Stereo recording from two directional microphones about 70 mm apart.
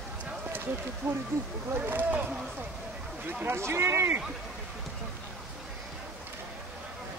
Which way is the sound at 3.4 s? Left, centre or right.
Right.